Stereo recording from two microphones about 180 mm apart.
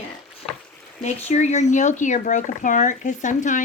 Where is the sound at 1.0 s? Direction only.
40° left (ahead or behind).